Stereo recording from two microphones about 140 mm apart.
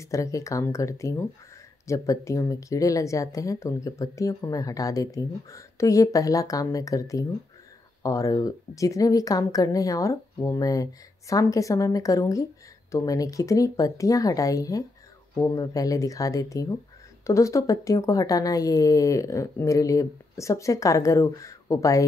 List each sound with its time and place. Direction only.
0.0 s speech: 20° left (ahead or behind)